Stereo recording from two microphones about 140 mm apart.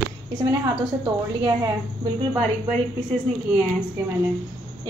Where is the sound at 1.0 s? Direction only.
30° right (ahead or behind).